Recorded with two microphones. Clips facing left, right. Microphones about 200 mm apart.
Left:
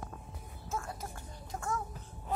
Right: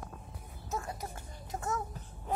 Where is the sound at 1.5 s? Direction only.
20° right (ahead or behind).